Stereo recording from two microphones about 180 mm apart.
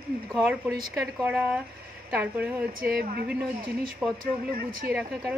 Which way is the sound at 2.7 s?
55° right (ahead or behind).